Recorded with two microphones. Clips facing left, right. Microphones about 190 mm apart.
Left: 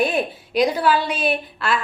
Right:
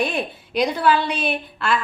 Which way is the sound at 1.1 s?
50° left (ahead or behind).